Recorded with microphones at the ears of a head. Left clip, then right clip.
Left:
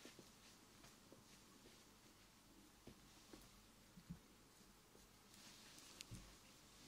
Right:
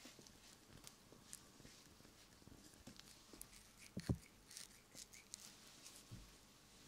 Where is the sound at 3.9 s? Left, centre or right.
Right.